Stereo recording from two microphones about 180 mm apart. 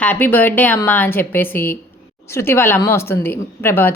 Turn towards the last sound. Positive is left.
turn(degrees=10)  # may be behind; listen again after turning